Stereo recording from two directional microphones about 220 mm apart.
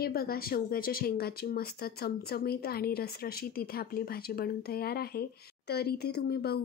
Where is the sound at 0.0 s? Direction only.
45° left (ahead or behind).